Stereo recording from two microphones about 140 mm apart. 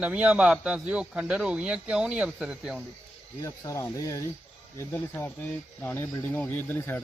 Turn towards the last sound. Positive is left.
turn(degrees=15)  # may be behind; listen again after turning